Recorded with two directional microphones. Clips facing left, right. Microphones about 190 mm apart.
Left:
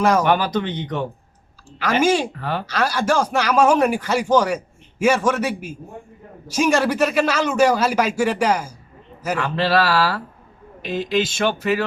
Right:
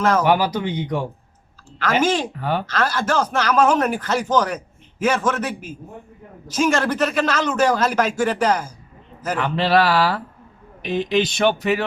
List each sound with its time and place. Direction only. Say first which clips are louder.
0.0 s speech: left 1 dB; 10° left (ahead or behind)
0.3 s speech: right 1 dB; 10° right (ahead or behind)
1.8 s speech: left 1 dB; 10° left (ahead or behind)
2.4 s speech: right 3 dB; 15° right (ahead or behind)
2.6 s speech: left 6 dB; 10° left (ahead or behind)
9.6 s speech: right 2 dB; 15° right (ahead or behind)